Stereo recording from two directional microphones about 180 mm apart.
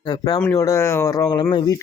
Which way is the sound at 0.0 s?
25° left (ahead or behind).